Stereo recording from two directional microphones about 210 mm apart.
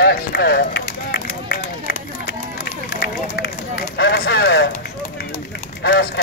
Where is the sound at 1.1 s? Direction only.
50° left (ahead or behind).